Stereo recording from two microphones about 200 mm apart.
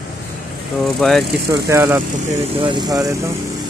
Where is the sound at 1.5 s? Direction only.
15° right (ahead or behind).